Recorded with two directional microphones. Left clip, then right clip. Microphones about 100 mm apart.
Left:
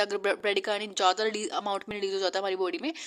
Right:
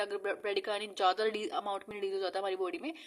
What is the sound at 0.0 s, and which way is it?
A woman's voice, 40° left (ahead or behind).